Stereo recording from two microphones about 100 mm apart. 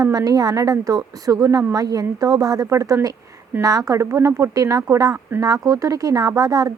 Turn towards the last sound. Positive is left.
turn(degrees=-35)  # may be behind; listen again after turning